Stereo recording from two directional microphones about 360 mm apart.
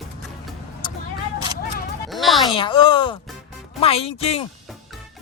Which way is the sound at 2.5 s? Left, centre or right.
Centre.